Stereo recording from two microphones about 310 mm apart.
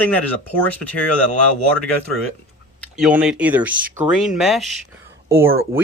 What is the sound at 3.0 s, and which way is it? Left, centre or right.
Speech, centre.